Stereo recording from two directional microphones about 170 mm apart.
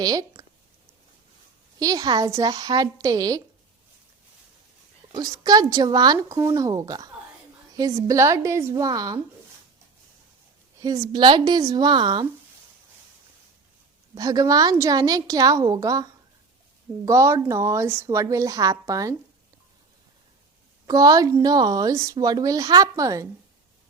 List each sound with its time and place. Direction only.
0.0 s speech: 20° right (ahead or behind)
1.8 s speech: 20° right (ahead or behind)
5.1 s speech: 20° right (ahead or behind)
10.8 s speech: 20° right (ahead or behind)
14.2 s speech: 20° right (ahead or behind)
17.1 s a woman's voice: 15° right (ahead or behind)
20.8 s speech: 20° right (ahead or behind)